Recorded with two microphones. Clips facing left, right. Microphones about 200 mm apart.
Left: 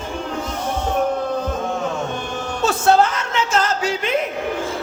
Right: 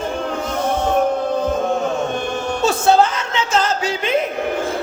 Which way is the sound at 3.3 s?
30° right (ahead or behind).